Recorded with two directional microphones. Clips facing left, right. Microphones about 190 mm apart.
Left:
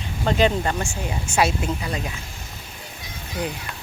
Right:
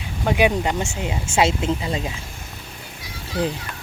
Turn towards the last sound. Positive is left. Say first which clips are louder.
# right 5 dB
turn(degrees=20)  # may be behind; listen again after turning